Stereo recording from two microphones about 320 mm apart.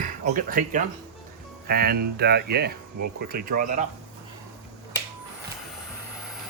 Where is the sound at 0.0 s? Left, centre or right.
Right.